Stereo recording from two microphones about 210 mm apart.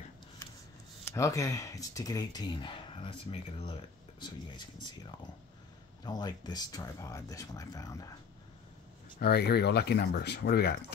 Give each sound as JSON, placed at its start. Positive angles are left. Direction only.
{"t": 1.0, "sound": "speech", "side_deg": 15}
{"t": 9.2, "sound": "speech", "side_deg": 50}